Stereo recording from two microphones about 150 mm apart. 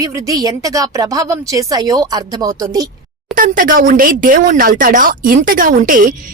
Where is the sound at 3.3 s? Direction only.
65° right (ahead or behind).